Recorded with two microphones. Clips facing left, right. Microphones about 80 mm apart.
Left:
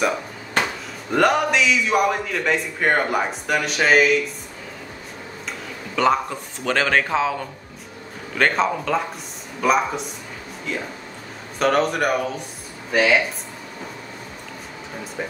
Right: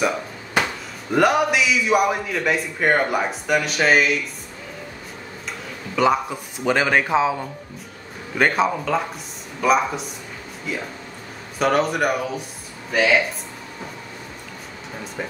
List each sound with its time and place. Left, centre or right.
1.1 s a man's voice: centre
6.0 s speech: centre
8.4 s a man's voice: centre